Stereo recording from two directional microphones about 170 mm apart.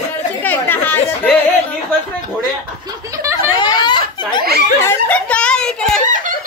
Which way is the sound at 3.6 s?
25° left (ahead or behind).